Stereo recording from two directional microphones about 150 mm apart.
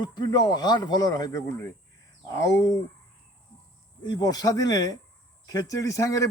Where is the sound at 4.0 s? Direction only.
25° left (ahead or behind).